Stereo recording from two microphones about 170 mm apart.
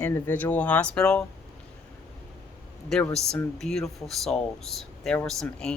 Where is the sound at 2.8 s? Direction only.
Centre (ahead or behind).